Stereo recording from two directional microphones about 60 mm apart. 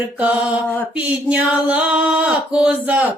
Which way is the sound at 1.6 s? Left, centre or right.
Centre.